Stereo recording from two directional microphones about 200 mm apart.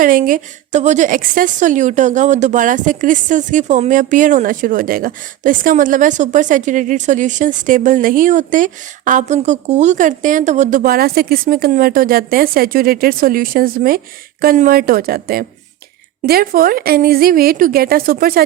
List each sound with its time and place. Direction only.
0.0 s a woman's voice: 45° right (ahead or behind)